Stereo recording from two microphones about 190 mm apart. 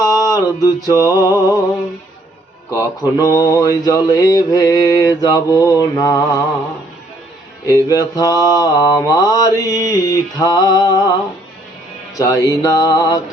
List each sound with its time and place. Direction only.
0.0 s music: 20° left (ahead or behind)
2.6 s mantra: 15° left (ahead or behind)
7.7 s mantra: 20° left (ahead or behind)
12.1 s speech: 15° left (ahead or behind)
12.6 s mantra: 20° left (ahead or behind)